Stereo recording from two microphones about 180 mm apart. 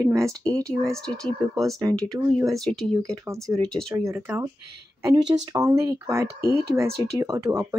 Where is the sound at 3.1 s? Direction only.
20° right (ahead or behind).